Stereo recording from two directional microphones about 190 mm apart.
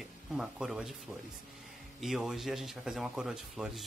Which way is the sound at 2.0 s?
Centre (ahead or behind).